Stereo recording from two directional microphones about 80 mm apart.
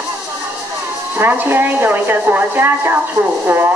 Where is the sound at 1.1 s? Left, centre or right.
Right.